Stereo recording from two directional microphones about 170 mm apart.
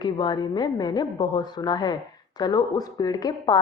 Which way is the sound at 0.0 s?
25° left (ahead or behind).